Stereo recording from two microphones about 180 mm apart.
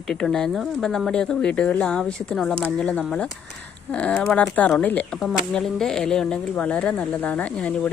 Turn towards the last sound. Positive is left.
turn(degrees=5)  # may be behind; listen again after turning